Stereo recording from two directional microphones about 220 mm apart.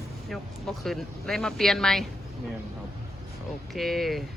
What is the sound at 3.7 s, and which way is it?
Speech, centre (ahead or behind).